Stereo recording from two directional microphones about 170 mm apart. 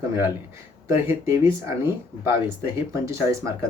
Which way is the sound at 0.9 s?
15° right (ahead or behind).